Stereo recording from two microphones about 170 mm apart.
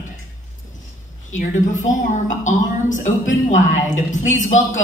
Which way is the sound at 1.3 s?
45° left (ahead or behind).